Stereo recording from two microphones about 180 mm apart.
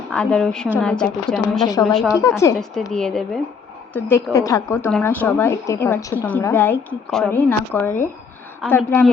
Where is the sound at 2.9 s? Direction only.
5° left (ahead or behind).